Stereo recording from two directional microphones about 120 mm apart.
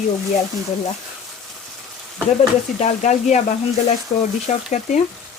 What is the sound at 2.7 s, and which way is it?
Speech, 85° left.